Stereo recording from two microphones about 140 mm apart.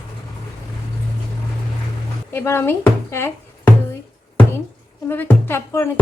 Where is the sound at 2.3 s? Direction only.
15° left (ahead or behind).